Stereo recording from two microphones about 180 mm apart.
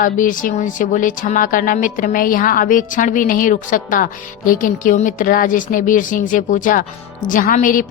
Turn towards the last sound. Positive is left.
turn(degrees=50)  # may be behind; listen again after turning